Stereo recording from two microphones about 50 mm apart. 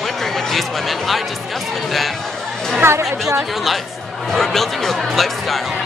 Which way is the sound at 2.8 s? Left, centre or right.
Right.